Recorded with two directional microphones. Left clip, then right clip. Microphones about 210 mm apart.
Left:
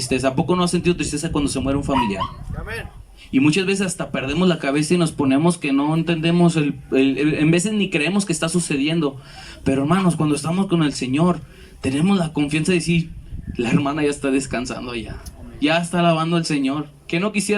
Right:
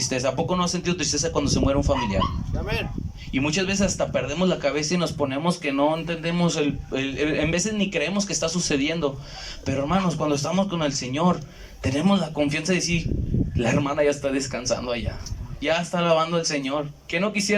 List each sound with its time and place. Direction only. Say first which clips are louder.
0.1 s speech: left 8 dB; 50° left (ahead or behind)
3.3 s speech: left 6 dB; 50° left (ahead or behind)